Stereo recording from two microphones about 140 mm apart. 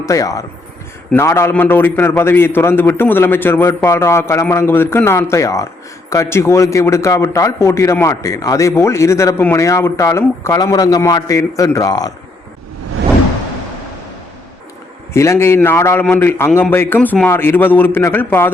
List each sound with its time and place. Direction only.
0.0 s a man's voice: 25° left (ahead or behind)
15.1 s a man's voice: 20° left (ahead or behind)